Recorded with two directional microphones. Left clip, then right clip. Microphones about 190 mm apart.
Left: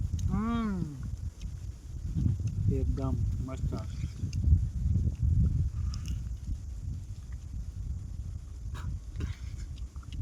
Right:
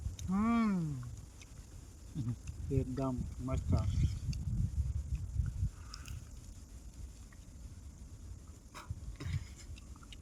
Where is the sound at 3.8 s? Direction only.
15° right (ahead or behind).